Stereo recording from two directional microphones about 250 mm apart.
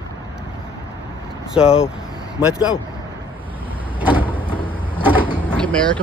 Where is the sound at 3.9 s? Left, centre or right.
Centre.